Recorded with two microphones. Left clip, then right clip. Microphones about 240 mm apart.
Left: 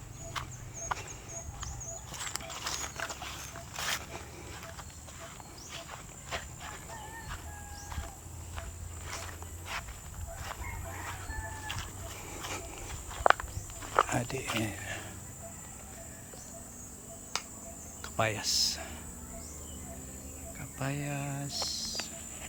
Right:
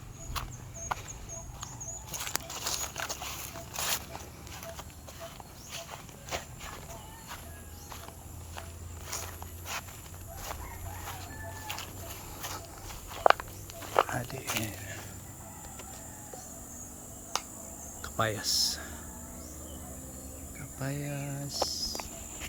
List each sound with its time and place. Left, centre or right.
0.4 s a sound: right
2.1 s patter: right
2.5 s a sound: right
5.7 s a sound: right
9.0 s music: right
11.6 s printer: right
12.9 s walk: right
13.8 s snake: right
14.1 s wild animals: left
14.6 s a sound: centre
18.0 s speech: centre
20.7 s speech: centre